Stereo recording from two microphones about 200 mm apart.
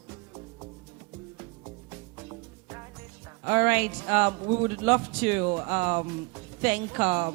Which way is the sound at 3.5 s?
10° right (ahead or behind).